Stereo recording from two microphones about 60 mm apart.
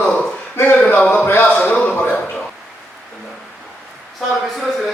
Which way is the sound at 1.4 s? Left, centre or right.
Centre.